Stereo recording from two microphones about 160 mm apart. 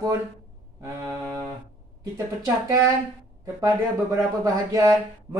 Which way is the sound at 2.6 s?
20° right (ahead or behind).